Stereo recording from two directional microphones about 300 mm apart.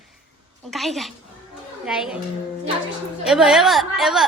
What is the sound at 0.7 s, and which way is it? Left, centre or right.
A woman's voice, centre.